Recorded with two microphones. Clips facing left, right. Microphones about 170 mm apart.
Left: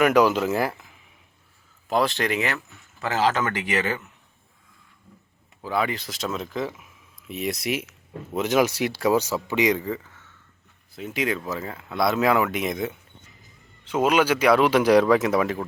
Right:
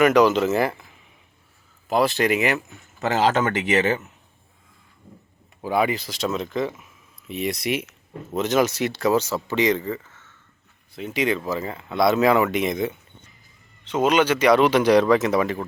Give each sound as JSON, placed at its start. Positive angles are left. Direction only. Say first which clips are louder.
{"t": 0.0, "sound": "speech", "louder": "right 2 dB", "side_deg": 5}
{"t": 1.9, "sound": "speech", "louder": "right 3 dB", "side_deg": -5}
{"t": 3.0, "sound": "speech", "louder": "right 3 dB", "side_deg": -20}
{"t": 5.6, "sound": "speech", "louder": "right 4 dB", "side_deg": -15}
{"t": 6.0, "sound": "speech", "louder": "right 4 dB", "side_deg": 0}
{"t": 10.0, "sound": "a sound", "louder": "left 1 dB", "side_deg": -5}
{"t": 10.9, "sound": "speech", "louder": "right 3 dB", "side_deg": 0}